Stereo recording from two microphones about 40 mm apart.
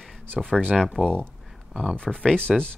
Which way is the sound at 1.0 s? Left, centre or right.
Right.